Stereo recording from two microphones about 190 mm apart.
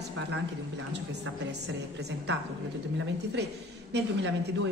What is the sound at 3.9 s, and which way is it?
Speech, 70° right (ahead or behind).